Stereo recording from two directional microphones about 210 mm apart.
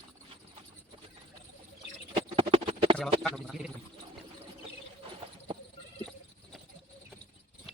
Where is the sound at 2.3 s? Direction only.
25° right (ahead or behind).